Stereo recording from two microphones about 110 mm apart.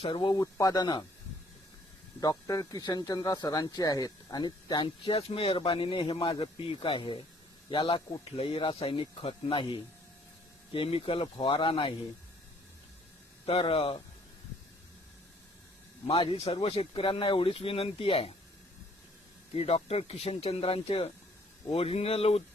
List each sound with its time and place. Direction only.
0.0 s speech: 50° left (ahead or behind)
0.5 s speech: 30° left (ahead or behind)
2.2 s speech: 30° left (ahead or behind); by 11.9 s 50° left (ahead or behind)
13.4 s speech: 55° left (ahead or behind)
16.0 s speech: 60° left (ahead or behind)
19.5 s speech: 70° left (ahead or behind)